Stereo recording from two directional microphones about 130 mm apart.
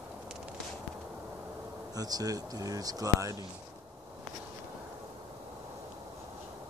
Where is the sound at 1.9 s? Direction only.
30° right (ahead or behind).